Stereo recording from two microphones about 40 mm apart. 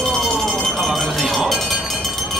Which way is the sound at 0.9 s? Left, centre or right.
Centre.